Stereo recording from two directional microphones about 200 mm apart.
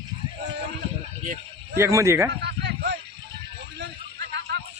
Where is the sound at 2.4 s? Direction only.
55° right (ahead or behind).